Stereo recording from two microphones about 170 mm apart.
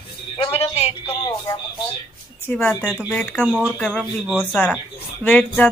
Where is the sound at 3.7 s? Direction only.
5° left (ahead or behind).